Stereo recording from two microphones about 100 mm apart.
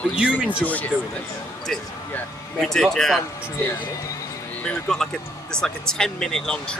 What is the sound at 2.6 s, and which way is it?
Speech, 5° left (ahead or behind).